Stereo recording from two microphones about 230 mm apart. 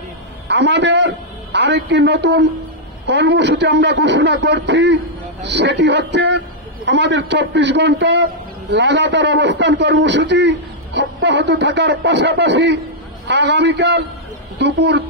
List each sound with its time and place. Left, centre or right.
0.5 s a man's voice: right